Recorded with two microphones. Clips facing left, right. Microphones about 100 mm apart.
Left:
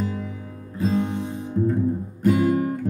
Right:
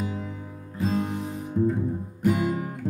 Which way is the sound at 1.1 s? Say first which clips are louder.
Left 3 dB; 25° left (ahead or behind).